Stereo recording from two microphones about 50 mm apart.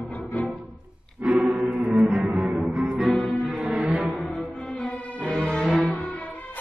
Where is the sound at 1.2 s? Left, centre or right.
Centre.